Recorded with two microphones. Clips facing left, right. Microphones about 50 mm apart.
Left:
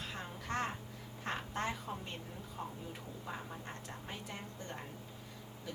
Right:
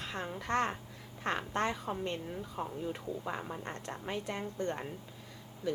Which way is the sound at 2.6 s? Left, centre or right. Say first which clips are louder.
Right 5 dB; right.